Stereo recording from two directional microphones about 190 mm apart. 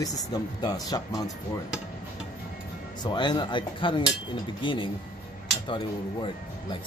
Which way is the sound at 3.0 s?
25° left (ahead or behind).